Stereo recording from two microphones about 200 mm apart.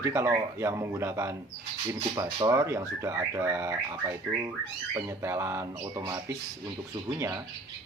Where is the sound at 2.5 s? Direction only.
15° right (ahead or behind).